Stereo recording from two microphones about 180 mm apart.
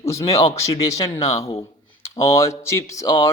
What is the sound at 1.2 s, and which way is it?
Speech, 35° left (ahead or behind).